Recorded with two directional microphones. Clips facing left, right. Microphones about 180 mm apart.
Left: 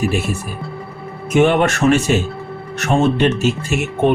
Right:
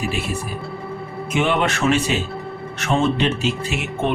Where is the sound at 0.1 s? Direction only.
45° left (ahead or behind).